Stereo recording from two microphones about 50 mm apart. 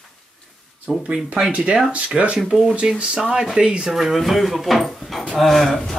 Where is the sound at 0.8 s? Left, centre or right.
Right.